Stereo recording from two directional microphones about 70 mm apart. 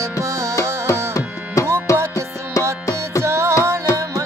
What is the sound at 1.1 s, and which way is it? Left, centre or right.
Tabla, left.